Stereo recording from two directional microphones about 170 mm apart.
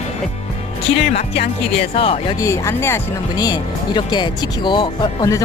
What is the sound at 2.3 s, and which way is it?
Speech, 20° left (ahead or behind).